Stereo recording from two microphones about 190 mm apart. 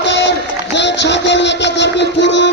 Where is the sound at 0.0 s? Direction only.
65° left (ahead or behind).